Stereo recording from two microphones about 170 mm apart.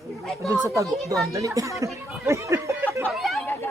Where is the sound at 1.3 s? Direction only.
20° right (ahead or behind).